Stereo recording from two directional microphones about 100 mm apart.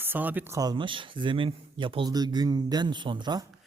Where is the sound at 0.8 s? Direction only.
55° right (ahead or behind).